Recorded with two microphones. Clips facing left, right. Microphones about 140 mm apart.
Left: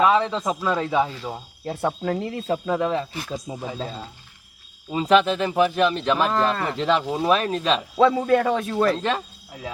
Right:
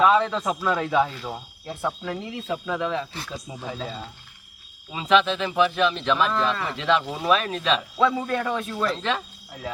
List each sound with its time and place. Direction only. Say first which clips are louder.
0.0 s speech: even; 5° left (ahead or behind)
1.6 s speech: left 4 dB; 65° left (ahead or behind)
2.0 s speech: left 5 dB; 50° left (ahead or behind)
2.6 s a man's voice: left 4 dB; 35° left (ahead or behind)
3.3 s speech: left 3 dB; 10° left (ahead or behind)
4.9 s a man's voice: left 3 dB; 40° left (ahead or behind)
7.0 s speech: left 6 dB; 15° left (ahead or behind)
7.3 s a man's voice: left 1 dB; 35° left (ahead or behind)
7.9 s a man's voice: left 9 dB; 60° left (ahead or behind)
8.8 s speech: left 5 dB; 45° left (ahead or behind)